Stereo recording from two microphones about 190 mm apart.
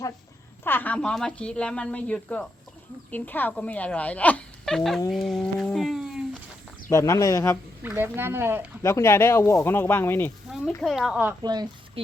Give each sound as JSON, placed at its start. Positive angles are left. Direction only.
{"t": 0.6, "sound": "speech", "side_deg": 10}
{"t": 5.1, "sound": "a sound", "side_deg": 0}
{"t": 6.9, "sound": "speech", "side_deg": 15}
{"t": 7.8, "sound": "speech", "side_deg": -10}
{"t": 8.8, "sound": "speech", "side_deg": 15}
{"t": 10.7, "sound": "speech", "side_deg": 0}
{"t": 11.4, "sound": "speech", "side_deg": -20}